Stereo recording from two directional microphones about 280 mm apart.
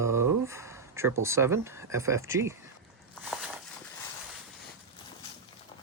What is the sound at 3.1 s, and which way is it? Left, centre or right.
Walk, centre.